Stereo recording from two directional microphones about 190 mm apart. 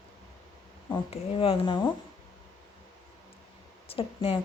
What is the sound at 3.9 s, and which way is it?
Speech, 30° left (ahead or behind).